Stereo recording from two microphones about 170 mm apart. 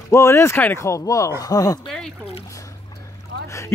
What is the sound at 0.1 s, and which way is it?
Speech, 15° left (ahead or behind).